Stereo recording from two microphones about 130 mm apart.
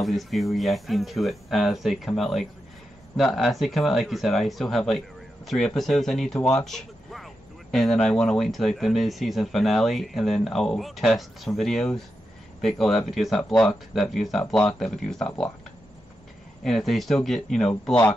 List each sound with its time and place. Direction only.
0.0 s speech: centre (ahead or behind)
16.6 s speech: centre (ahead or behind)